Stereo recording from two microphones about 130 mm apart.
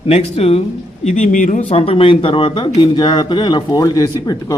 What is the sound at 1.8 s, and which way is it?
Speech, 45° left (ahead or behind).